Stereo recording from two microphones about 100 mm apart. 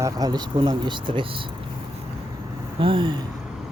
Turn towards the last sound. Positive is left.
turn(degrees=-60)  # may be behind; listen again after turning